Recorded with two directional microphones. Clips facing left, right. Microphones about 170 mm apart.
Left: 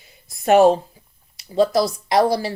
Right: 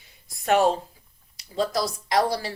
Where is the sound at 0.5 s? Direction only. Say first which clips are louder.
Left 7 dB; 50° left (ahead or behind).